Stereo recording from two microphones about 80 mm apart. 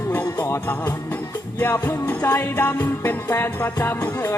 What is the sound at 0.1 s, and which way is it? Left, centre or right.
Music, left.